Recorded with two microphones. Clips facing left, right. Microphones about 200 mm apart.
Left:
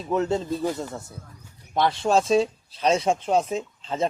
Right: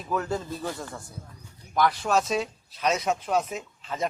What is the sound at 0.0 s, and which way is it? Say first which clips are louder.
Speech: left 5 dB; 25° left (ahead or behind).